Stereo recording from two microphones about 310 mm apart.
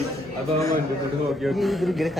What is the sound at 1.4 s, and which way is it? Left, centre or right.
Speech, centre.